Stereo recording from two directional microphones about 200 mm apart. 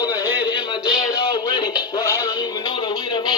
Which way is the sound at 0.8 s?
20° left (ahead or behind).